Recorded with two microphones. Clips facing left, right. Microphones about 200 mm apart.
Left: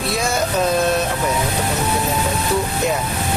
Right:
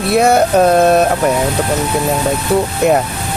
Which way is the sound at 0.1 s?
60° right (ahead or behind).